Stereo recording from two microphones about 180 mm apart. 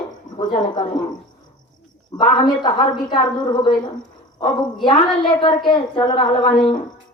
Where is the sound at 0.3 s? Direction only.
25° left (ahead or behind).